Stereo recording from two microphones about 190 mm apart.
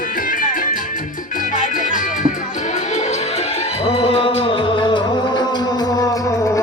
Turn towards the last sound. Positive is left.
turn(degrees=15)  # may be behind; listen again after turning